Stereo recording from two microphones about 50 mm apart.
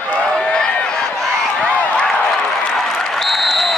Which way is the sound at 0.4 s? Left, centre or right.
Left.